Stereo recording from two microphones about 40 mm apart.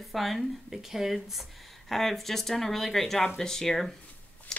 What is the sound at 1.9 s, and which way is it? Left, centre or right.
Speech, centre.